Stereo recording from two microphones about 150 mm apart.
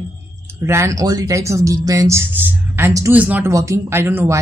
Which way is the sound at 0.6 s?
20° right (ahead or behind).